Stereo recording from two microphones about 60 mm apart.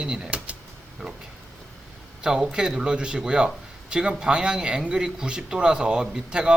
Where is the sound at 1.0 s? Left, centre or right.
Right.